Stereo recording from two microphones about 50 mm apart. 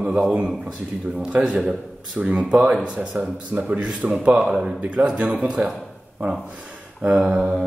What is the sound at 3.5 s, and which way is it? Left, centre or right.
Speech, right.